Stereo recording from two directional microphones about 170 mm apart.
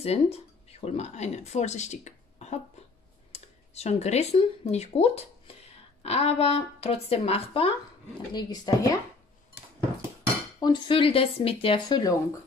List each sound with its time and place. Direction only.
0.0 s speech: 35° left (ahead or behind)
8.3 s speech: 25° left (ahead or behind)
10.6 s speech: 25° left (ahead or behind)